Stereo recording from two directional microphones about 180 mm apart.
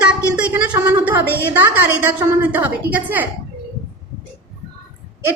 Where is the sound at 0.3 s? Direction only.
5° right (ahead or behind).